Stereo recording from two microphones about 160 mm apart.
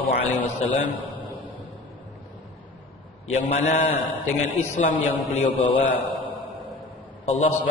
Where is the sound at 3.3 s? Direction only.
45° left (ahead or behind).